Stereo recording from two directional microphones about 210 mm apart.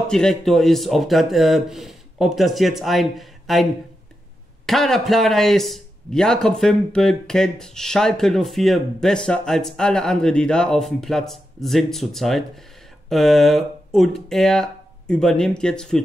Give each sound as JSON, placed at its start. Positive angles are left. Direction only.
{"t": 0.1, "sound": "a man's voice", "side_deg": 5}
{"t": 4.6, "sound": "a man's voice", "side_deg": 0}